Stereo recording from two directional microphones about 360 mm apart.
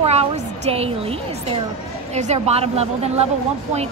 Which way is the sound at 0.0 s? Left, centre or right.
Centre.